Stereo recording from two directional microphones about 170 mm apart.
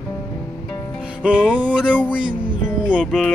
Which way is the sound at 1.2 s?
5° right (ahead or behind).